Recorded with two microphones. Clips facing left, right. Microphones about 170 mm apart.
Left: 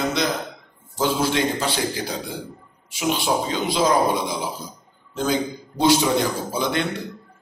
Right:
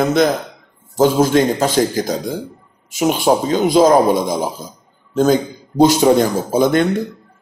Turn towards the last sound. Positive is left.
turn(degrees=-45)  # may be behind; listen again after turning